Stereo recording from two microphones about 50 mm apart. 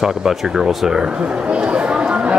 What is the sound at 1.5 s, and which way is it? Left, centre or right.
Chatter, right.